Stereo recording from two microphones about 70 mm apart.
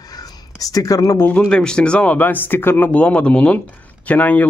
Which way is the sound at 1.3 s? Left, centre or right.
Centre.